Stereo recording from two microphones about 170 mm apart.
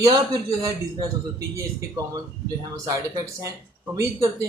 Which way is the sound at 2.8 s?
20° right (ahead or behind).